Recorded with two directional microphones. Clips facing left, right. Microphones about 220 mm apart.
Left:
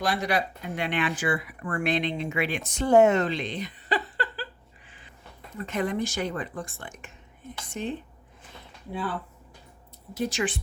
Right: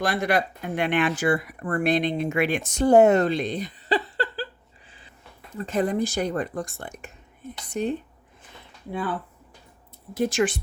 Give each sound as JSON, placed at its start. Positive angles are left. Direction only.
{"t": 0.0, "sound": "speech", "side_deg": -50}
{"t": 5.5, "sound": "speech", "side_deg": -35}
{"t": 10.2, "sound": "speech", "side_deg": -50}